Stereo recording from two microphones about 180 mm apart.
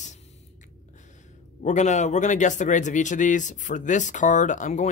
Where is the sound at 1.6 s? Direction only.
40° left (ahead or behind).